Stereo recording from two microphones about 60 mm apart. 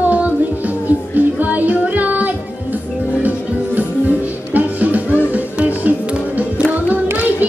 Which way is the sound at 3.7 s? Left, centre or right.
Right.